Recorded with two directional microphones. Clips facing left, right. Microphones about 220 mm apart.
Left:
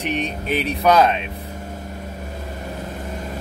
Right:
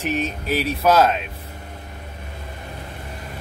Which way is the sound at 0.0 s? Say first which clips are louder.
Even; 5° right (ahead or behind).